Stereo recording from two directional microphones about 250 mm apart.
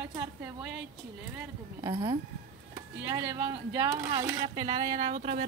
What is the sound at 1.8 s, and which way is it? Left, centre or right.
A woman's voice, centre.